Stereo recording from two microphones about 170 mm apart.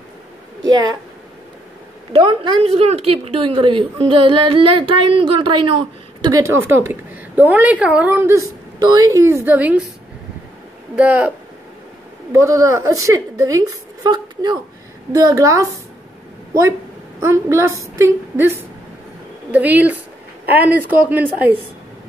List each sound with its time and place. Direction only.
2.2 s a woman's voice: 35° right (ahead or behind); by 9.8 s 10° right (ahead or behind)
11.0 s a woman's voice: 10° right (ahead or behind)
17.2 s a woman's voice: 15° right (ahead or behind)